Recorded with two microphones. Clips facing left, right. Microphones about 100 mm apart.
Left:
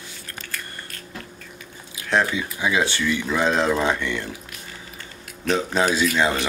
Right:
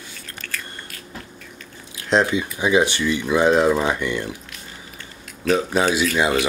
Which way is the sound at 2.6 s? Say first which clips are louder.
Right 4 dB; 20° right (ahead or behind).